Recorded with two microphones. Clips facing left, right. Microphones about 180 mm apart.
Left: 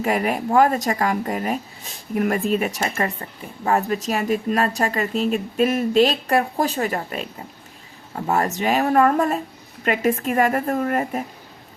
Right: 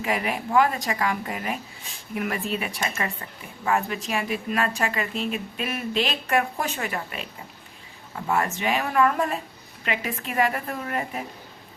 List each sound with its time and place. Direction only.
0.0 s a woman's voice: 45° left (ahead or behind)